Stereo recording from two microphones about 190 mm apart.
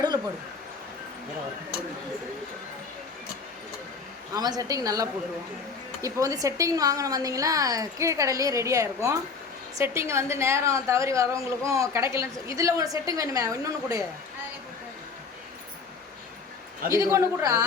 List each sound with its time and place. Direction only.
4.4 s a woman's voice: 20° right (ahead or behind)
16.9 s a woman's voice: 15° right (ahead or behind)